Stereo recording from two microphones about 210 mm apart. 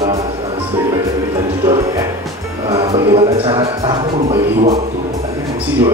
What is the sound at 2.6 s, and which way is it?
Speech, 15° right (ahead or behind).